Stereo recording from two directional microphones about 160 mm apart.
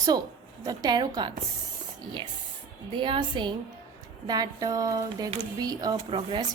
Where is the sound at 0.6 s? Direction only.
25° right (ahead or behind).